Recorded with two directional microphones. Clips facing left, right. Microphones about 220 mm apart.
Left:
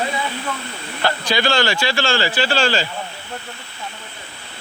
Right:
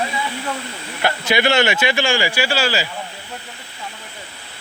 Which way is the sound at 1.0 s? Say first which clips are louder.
Right 1 dB; 20° right (ahead or behind).